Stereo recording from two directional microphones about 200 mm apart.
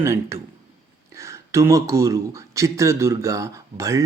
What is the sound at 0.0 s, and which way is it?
Speech, 15° right (ahead or behind).